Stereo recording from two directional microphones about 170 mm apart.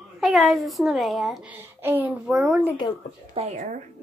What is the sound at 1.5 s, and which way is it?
Speech, 10° right (ahead or behind).